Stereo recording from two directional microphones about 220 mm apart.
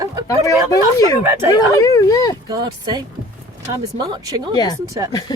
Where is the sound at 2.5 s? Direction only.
20° right (ahead or behind).